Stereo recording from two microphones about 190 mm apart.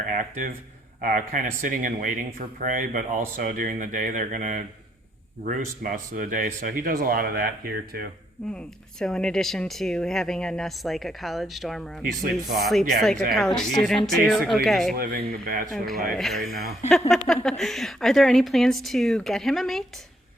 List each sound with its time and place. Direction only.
0.0 s speech: 45° right (ahead or behind)
8.5 s speech: 5° left (ahead or behind)
14.9 s speech: 50° right (ahead or behind)
16.1 s speech: centre (ahead or behind)
16.5 s speech: 55° right (ahead or behind)
17.2 s speech: centre (ahead or behind)